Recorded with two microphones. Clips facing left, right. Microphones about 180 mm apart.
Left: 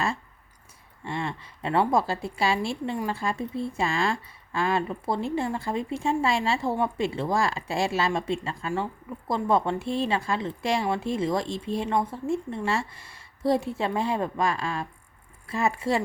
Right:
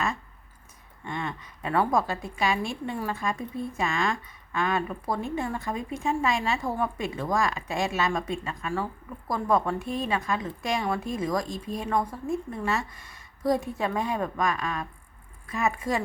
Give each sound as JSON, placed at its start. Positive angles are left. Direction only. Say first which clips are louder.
{"t": 1.0, "sound": "a woman's voice", "louder": "left 2 dB", "side_deg": 30}